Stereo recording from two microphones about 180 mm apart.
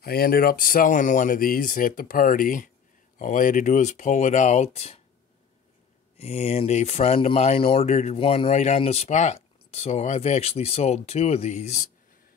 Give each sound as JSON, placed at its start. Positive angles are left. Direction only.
{"t": 0.0, "sound": "speech", "side_deg": 55}
{"t": 6.1, "sound": "speech", "side_deg": 35}